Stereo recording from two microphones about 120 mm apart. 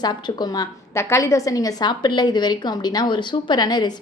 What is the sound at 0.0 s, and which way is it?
A woman's voice, 35° left (ahead or behind).